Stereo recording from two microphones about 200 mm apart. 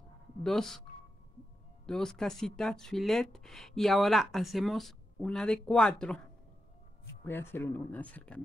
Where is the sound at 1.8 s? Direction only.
Centre (ahead or behind).